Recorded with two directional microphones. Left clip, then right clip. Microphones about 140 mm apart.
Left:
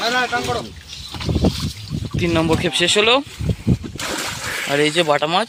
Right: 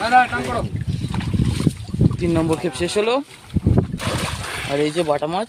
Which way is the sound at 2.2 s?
5° left (ahead or behind).